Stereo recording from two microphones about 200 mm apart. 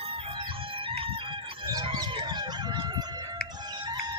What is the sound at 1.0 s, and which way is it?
Chicken, 25° right (ahead or behind).